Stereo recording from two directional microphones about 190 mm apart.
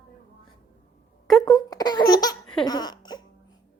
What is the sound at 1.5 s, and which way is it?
Laughter, 20° left (ahead or behind).